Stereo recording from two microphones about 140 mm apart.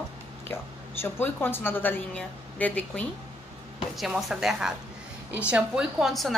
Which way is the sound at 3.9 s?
Centre (ahead or behind).